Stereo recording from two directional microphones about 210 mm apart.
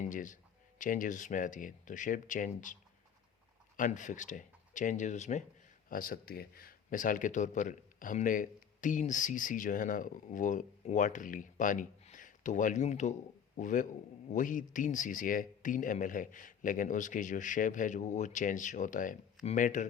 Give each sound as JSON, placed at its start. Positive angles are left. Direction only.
{"t": 0.1, "sound": "speech", "side_deg": 40}
{"t": 3.8, "sound": "speech", "side_deg": 35}